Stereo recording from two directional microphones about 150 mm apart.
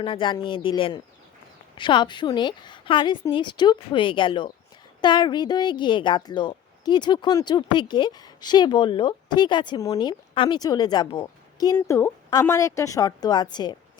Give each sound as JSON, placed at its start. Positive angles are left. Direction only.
{"t": 0.0, "sound": "a woman's voice", "side_deg": 35}